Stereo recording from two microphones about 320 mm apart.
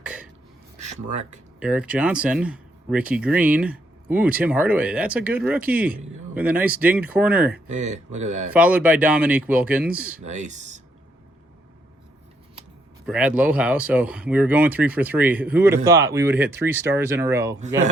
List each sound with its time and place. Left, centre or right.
0.0 s a sound: centre
0.8 s speech: right
1.5 s speech: centre
7.7 s speech: right
8.5 s speech: centre
10.2 s speech: right
13.1 s speech: centre